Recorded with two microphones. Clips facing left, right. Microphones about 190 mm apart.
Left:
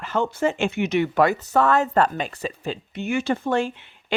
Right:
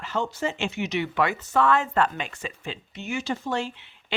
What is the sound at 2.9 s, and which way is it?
Speech, 55° left (ahead or behind).